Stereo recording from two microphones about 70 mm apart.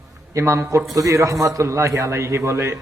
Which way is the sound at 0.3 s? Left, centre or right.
Right.